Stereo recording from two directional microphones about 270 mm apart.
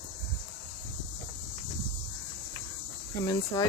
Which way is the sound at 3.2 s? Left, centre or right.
Centre.